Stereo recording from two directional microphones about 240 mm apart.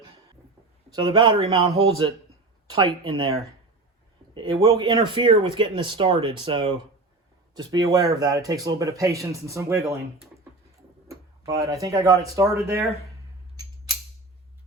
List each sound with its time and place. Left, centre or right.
0.9 s speech: centre
4.4 s speech: centre
11.1 s tick-tock: centre
11.7 s speech: centre